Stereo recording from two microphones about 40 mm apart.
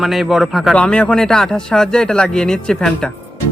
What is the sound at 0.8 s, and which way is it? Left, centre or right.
Speech, left.